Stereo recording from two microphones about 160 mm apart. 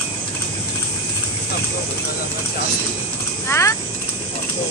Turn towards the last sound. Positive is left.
turn(degrees=15)  # may be behind; listen again after turning